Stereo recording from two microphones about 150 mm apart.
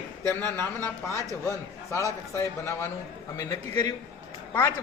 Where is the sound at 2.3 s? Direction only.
15° left (ahead or behind).